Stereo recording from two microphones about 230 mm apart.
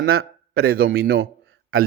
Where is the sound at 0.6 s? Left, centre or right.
Right.